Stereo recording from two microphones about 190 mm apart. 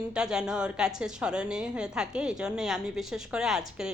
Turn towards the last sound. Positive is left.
turn(degrees=-5)  # may be behind; listen again after turning